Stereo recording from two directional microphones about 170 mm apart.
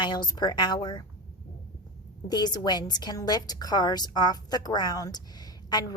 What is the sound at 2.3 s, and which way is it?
A woman's voice, 25° left (ahead or behind).